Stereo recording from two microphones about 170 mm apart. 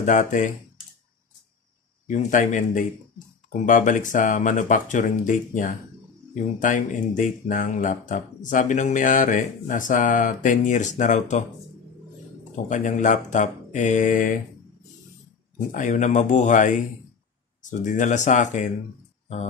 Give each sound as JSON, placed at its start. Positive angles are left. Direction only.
{"t": 0.0, "sound": "speech", "side_deg": 50}
{"t": 2.0, "sound": "speech", "side_deg": 45}
{"t": 12.6, "sound": "speech", "side_deg": 45}
{"t": 15.5, "sound": "speech", "side_deg": 50}